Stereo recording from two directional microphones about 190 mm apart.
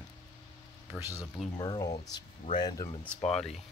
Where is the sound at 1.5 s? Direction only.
20° left (ahead or behind).